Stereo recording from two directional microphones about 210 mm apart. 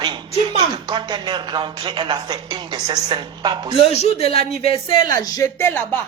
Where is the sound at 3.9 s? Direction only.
30° left (ahead or behind).